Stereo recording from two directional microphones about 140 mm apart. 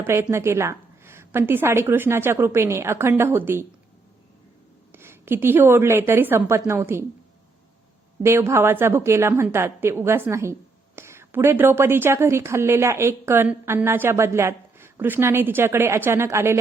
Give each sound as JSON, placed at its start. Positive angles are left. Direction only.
{"t": 0.1, "sound": "a woman's voice", "side_deg": -20}
{"t": 4.9, "sound": "a woman's voice", "side_deg": -15}
{"t": 8.2, "sound": "a woman's voice", "side_deg": -20}